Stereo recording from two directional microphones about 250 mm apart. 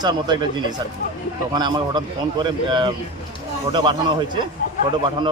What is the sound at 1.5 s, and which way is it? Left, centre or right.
Speech, centre.